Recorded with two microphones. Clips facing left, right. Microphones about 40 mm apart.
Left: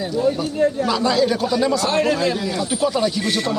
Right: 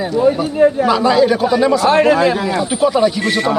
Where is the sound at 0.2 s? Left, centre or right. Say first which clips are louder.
Right 7 dB; right.